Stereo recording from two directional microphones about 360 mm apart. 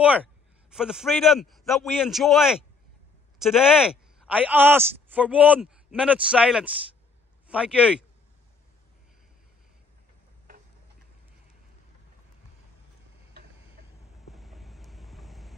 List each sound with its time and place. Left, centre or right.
0.7 s a man's voice: centre
13.8 s vehicle: right
14.3 s vehicle: centre